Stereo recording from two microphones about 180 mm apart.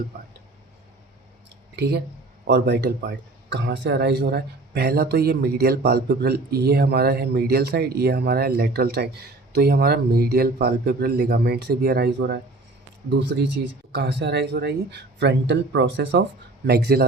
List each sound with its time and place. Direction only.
1.7 s speech: 70° right (ahead or behind)
16.6 s speech: 60° right (ahead or behind)